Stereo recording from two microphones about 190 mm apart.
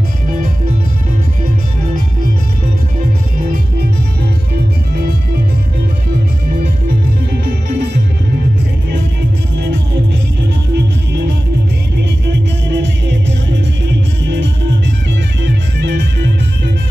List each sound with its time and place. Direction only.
12.7 s music: 70° right (ahead or behind)
15.4 s music: 65° right (ahead or behind)